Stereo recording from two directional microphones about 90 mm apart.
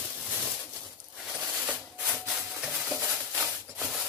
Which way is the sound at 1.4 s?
10° right (ahead or behind).